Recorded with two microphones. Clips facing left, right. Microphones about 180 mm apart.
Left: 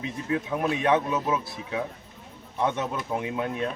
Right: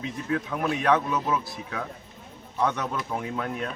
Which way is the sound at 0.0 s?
20° left (ahead or behind).